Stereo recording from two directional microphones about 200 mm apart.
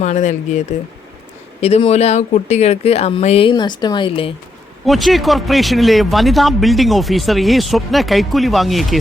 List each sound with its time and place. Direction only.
0.0 s speech: 35° left (ahead or behind)
1.6 s speech: 30° left (ahead or behind)
4.9 s speech: centre (ahead or behind)